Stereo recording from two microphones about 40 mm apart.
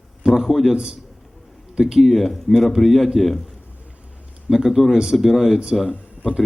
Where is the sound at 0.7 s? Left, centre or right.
Centre.